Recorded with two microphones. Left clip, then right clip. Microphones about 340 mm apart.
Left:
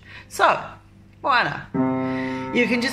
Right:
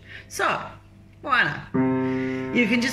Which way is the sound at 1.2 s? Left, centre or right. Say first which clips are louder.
Left 2 dB; centre.